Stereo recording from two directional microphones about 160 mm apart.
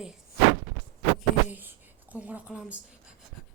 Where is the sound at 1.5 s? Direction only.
10° right (ahead or behind).